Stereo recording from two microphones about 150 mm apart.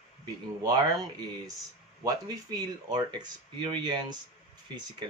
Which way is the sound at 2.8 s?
30° right (ahead or behind).